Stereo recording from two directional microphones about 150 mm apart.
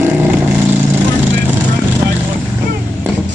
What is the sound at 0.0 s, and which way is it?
Vehicle, 10° right (ahead or behind).